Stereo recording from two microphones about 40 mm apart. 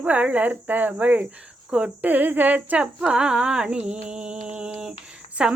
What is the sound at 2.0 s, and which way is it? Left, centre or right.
Speech, right.